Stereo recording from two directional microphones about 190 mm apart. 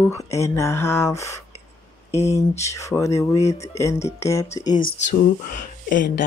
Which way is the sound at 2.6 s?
15° left (ahead or behind).